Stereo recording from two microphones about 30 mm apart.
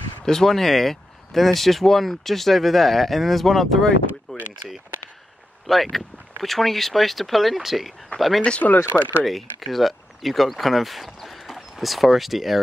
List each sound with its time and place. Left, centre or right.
0.2 s speech: centre
4.3 s a sound: left
5.7 s speech: centre
8.5 s speech: left
9.2 s speech: centre
11.1 s clip-clop: centre
11.8 s speech: centre